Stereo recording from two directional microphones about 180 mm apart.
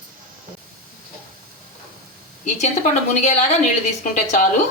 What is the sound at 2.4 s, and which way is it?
Speech, 40° left (ahead or behind).